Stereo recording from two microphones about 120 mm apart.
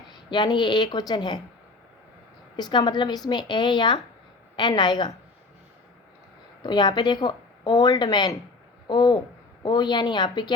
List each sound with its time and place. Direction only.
0.3 s a woman's voice: 40° left (ahead or behind)
2.6 s a woman's voice: 35° left (ahead or behind)
6.6 s a woman's voice: 35° left (ahead or behind)